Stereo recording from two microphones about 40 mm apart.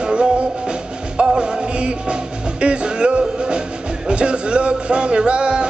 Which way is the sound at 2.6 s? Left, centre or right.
Right.